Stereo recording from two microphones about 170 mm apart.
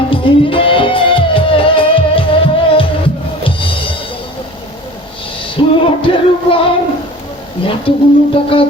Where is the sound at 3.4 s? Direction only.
30° left (ahead or behind).